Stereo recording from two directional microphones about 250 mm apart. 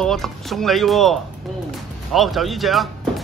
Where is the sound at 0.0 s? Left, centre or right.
Centre.